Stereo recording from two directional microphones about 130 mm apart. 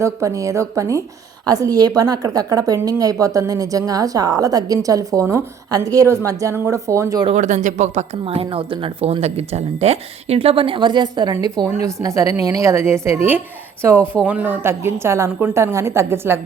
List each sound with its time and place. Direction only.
0.0 s a woman's voice: 25° right (ahead or behind)
7.3 s speech: 70° right (ahead or behind)
8.2 s a woman's voice: 45° right (ahead or behind); by 16.4 s 20° right (ahead or behind)